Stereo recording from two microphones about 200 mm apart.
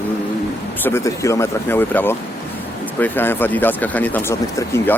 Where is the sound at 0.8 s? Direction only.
15° left (ahead or behind).